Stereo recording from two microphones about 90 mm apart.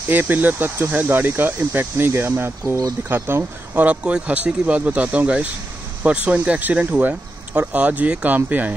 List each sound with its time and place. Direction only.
0.1 s speech: 20° right (ahead or behind)